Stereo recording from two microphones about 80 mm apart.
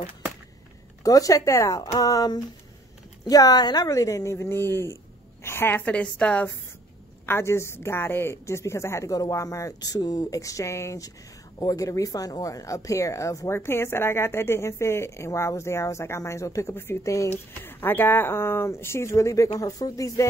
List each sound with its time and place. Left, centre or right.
1.0 s a woman's voice: left; by 6.5 s centre
7.2 s a woman's voice: left
13.5 s a woman's voice: left